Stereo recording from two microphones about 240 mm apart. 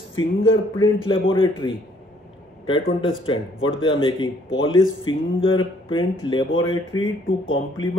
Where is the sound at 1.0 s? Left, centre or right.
Left.